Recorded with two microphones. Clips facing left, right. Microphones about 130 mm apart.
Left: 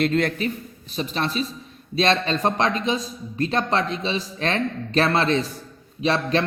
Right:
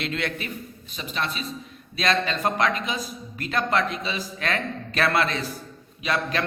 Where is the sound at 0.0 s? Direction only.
40° left (ahead or behind).